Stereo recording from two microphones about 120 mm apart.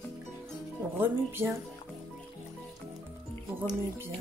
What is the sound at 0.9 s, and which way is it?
Speech, 20° right (ahead or behind).